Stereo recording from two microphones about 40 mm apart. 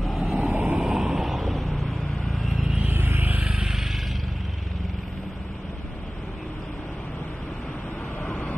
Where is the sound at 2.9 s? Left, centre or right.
Right.